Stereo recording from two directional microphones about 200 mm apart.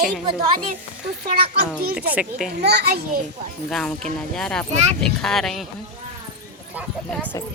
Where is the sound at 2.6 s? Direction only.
55° right (ahead or behind).